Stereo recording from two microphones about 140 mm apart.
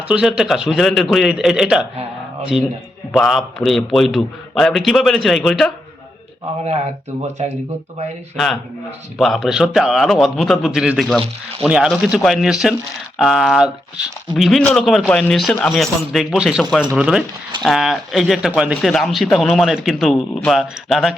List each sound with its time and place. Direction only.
0.1 s speech: 5° right (ahead or behind)
6.7 s speech: 50° right (ahead or behind)
9.1 s speech: centre (ahead or behind)
14.6 s speech: 10° left (ahead or behind)